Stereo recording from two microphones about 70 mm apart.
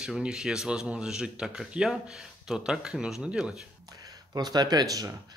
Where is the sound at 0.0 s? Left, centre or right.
Centre.